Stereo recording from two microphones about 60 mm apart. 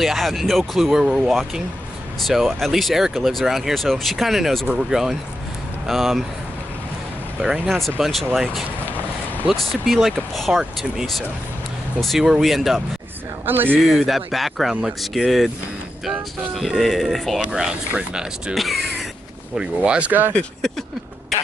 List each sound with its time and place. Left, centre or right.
0.0 s speech: centre
1.0 s speech: centre
2.2 s speech: centre
7.6 s speech: centre
13.5 s speech: right
13.9 s speech: centre
17.5 s speech: centre
18.5 s speech: centre
19.5 s speech: centre
20.1 s speech: right